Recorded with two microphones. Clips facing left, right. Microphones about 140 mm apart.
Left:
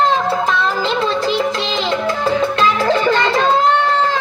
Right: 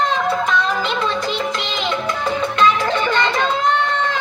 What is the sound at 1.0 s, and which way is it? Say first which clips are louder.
Music: left 4 dB; 25° left (ahead or behind).